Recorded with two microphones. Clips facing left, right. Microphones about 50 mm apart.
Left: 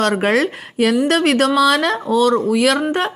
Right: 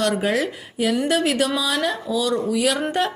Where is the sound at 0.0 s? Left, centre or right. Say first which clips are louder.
Left 5 dB; left.